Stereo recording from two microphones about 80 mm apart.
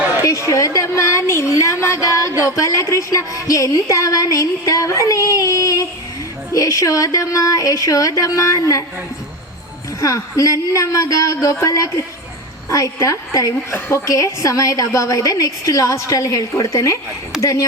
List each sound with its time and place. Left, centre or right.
0.3 s a woman's voice: left
10.0 s a woman's voice: left
17.3 s speech: centre